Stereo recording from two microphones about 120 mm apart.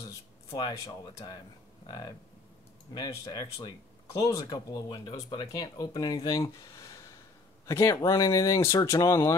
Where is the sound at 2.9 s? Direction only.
30° left (ahead or behind).